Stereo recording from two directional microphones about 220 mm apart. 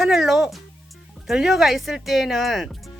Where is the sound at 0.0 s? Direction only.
Centre (ahead or behind).